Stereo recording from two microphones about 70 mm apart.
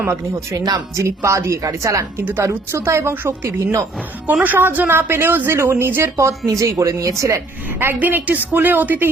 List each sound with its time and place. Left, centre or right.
0.0 s a woman's voice: right
0.5 s speech: right
0.9 s a woman's voice: right
4.3 s a woman's voice: right
7.9 s a woman's voice: right